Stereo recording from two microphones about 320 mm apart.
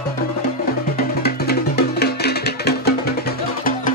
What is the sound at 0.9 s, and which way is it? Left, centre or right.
Music, left.